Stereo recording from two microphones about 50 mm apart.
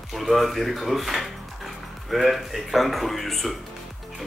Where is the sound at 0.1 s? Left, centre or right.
Centre.